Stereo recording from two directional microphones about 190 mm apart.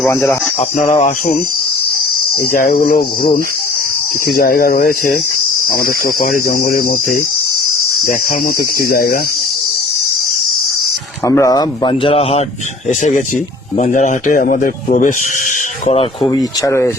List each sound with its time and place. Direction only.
0.1 s speech: 15° left (ahead or behind)
0.8 s speech: 40° left (ahead or behind)
2.5 s speech: 50° left (ahead or behind)
4.3 s speech: 55° left (ahead or behind)
8.0 s speech: 45° left (ahead or behind)
11.3 s speech: 15° left (ahead or behind); by 15.1 s 40° left (ahead or behind)
15.9 s speech: 30° left (ahead or behind)